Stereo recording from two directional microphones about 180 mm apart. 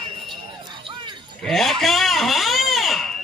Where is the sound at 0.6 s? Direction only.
25° right (ahead or behind).